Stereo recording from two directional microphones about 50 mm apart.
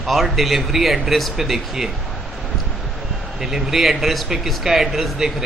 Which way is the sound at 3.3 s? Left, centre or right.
Centre.